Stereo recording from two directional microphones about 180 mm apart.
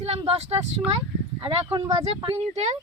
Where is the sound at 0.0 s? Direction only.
35° right (ahead or behind).